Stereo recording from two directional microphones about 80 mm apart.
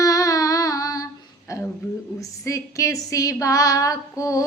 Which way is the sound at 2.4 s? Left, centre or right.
Left.